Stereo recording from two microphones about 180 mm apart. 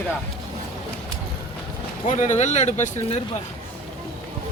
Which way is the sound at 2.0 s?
40° left (ahead or behind).